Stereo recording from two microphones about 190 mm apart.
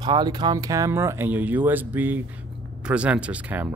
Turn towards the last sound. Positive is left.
turn(degrees=-10)  # may be behind; listen again after turning